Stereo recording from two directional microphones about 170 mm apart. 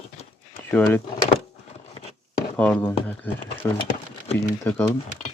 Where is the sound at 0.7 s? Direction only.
10° left (ahead or behind).